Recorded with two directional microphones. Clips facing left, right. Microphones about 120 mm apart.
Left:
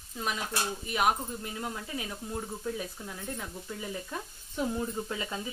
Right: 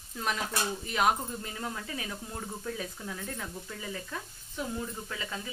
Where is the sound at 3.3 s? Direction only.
15° left (ahead or behind).